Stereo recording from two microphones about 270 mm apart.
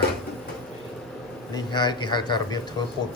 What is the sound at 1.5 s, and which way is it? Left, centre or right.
A man's voice, centre.